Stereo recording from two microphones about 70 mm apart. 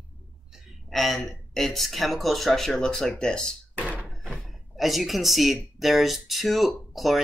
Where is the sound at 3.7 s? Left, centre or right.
Right.